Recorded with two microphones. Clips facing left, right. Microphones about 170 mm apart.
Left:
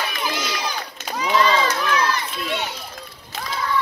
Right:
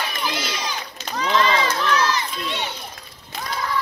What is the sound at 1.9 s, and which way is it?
Crowd, 55° left (ahead or behind).